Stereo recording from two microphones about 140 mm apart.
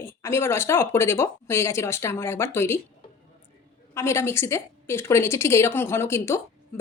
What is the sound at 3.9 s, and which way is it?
Speech, 20° left (ahead or behind).